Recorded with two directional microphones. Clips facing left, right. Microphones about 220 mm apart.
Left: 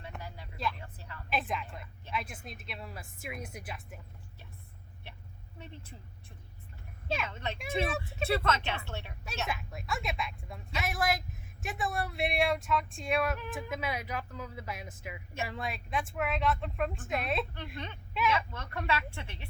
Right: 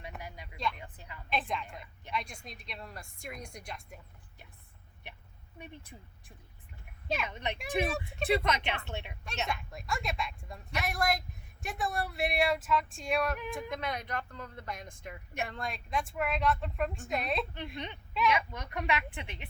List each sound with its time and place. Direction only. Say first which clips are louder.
0.2 s vehicle: even; 15° right (ahead or behind)
0.5 s vehicle: even; 5° left (ahead or behind)
0.8 s a sound: even; 15° right (ahead or behind)
1.3 s a woman's voice: even; 5° left (ahead or behind)
5.5 s a woman's voice: right 1 dB; 15° right (ahead or behind)
7.9 s a woman's voice: even; centre (ahead or behind)
8.3 s speech: right 1 dB; 15° right (ahead or behind)
9.5 s a woman's voice: even; 5° left (ahead or behind)
17.7 s speech: right 1 dB; 15° right (ahead or behind)